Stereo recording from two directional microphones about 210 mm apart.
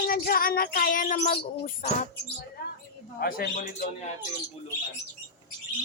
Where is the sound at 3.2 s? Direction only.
45° left (ahead or behind).